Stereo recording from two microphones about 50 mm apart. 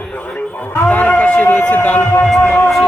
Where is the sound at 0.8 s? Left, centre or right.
Left.